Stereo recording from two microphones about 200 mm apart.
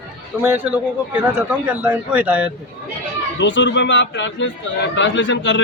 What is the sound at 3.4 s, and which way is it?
Speech, 65° left (ahead or behind).